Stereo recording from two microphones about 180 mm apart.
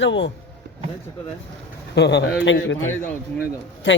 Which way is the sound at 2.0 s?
70° left (ahead or behind).